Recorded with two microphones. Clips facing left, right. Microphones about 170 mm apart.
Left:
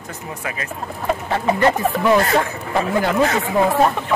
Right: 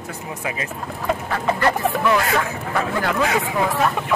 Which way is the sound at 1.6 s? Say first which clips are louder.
Left 2 dB; 25° left (ahead or behind).